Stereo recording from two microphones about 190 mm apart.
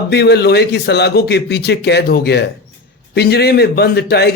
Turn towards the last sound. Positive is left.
turn(degrees=60)  # may be behind; listen again after turning